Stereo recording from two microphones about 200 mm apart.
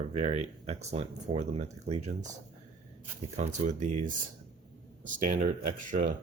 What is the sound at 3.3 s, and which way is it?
Speech, 35° right (ahead or behind).